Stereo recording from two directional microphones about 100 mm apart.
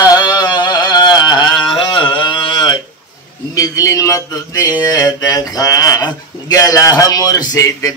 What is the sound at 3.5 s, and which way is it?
Mantra, 35° left (ahead or behind).